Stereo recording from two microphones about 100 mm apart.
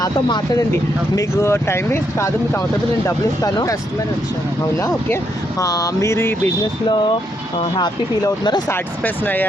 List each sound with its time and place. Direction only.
0.0 s mantra: 40° left (ahead or behind)
1.1 s speech: 30° left (ahead or behind)
3.4 s mantra: 40° left (ahead or behind)
4.8 s speech: 25° left (ahead or behind)
5.6 s mantra: 40° left (ahead or behind)
7.6 s speech: 45° left (ahead or behind)
8.7 s speech: 20° left (ahead or behind)